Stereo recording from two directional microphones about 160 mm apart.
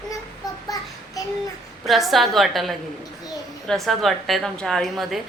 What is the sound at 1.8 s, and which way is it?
A woman's voice, centre (ahead or behind).